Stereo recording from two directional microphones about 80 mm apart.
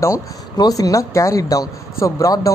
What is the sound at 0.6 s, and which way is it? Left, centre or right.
Speech, left.